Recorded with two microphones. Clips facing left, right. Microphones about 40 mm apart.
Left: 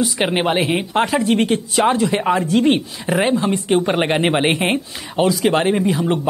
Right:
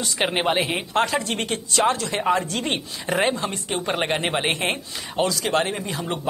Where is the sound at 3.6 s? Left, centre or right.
Centre.